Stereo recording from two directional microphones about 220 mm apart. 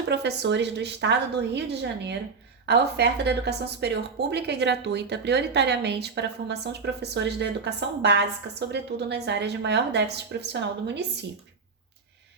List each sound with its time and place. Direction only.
0.1 s a woman's voice: 50° right (ahead or behind)